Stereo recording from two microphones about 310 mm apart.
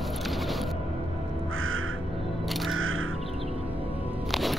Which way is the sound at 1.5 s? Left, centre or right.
Right.